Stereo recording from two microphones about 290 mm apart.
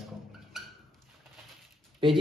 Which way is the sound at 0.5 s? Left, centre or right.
Centre.